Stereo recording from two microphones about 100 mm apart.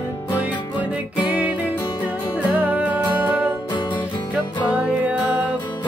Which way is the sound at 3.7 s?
55° left (ahead or behind).